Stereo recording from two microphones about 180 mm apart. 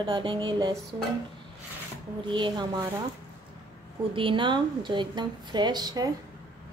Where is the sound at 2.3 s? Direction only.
25° right (ahead or behind).